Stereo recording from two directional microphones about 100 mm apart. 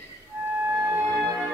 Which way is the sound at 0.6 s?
20° right (ahead or behind).